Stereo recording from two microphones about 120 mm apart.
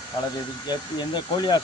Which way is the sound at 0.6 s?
35° left (ahead or behind).